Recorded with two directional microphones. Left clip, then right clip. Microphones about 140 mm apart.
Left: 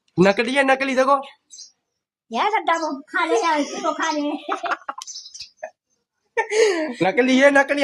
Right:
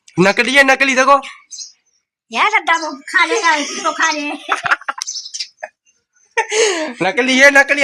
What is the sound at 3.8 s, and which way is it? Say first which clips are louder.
Speech: right 8 dB; 5° left (ahead or behind).